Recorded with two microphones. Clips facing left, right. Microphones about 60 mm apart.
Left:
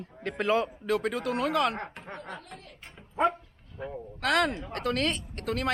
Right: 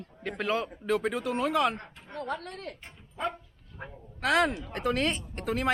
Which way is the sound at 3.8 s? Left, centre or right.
Right.